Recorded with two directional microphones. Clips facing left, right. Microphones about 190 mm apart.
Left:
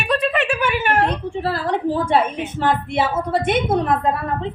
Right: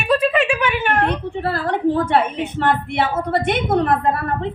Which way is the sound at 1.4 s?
60° right (ahead or behind).